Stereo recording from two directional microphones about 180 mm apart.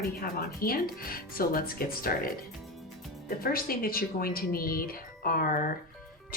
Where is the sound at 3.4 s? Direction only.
55° left (ahead or behind).